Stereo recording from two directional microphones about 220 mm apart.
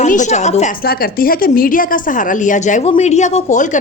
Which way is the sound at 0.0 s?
35° left (ahead or behind).